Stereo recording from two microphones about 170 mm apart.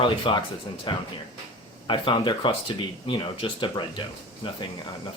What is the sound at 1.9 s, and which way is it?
Speech, 30° left (ahead or behind).